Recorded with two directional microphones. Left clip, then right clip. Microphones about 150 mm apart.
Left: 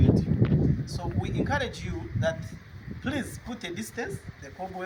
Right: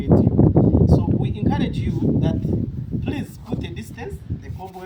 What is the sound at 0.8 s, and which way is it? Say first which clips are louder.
A man's voice: right 13 dB; 10° left (ahead or behind).